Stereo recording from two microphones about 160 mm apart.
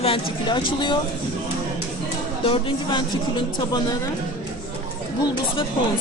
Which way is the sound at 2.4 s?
30° left (ahead or behind).